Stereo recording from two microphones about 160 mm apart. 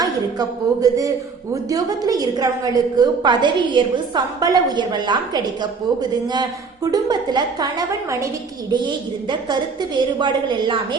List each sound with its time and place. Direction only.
0.0 s a woman's voice: 20° right (ahead or behind)